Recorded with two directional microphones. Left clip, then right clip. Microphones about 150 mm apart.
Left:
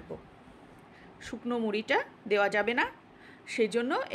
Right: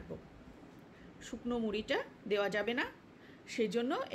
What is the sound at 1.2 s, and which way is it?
A woman's voice, 25° left (ahead or behind).